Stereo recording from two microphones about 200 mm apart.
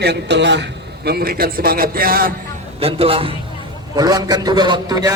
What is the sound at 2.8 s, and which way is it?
A man's voice, 30° right (ahead or behind).